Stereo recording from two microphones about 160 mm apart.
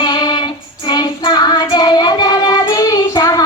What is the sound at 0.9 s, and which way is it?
Child singing, 25° left (ahead or behind).